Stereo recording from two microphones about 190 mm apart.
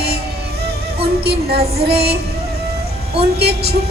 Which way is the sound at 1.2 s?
55° right (ahead or behind).